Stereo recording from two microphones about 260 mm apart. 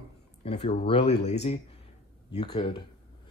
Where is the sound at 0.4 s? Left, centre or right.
Left.